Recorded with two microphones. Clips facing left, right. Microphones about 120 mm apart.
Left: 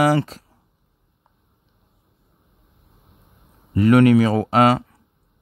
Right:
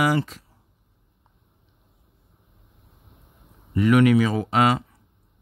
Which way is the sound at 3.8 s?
40° left (ahead or behind).